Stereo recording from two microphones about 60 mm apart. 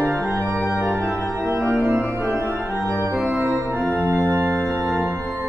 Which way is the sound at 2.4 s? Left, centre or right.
Right.